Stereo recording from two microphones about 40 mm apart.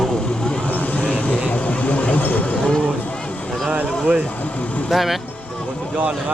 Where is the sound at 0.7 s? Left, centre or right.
Left.